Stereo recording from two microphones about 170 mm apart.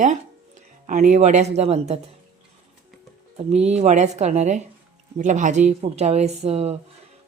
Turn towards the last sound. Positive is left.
turn(degrees=-35)  # may be behind; listen again after turning